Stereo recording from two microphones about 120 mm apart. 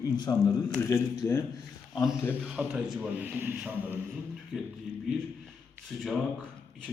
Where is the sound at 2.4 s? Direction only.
10° right (ahead or behind).